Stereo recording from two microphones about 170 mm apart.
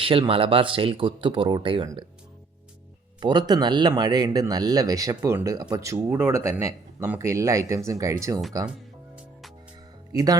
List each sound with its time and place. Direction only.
0.0 s speech: 35° right (ahead or behind)
3.2 s speech: 25° right (ahead or behind)
10.1 s speech: 20° right (ahead or behind)